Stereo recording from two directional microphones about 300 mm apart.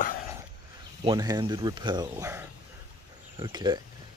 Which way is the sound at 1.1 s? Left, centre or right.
Centre.